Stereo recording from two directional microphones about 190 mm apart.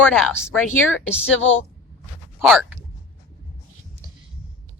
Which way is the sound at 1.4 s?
90° left.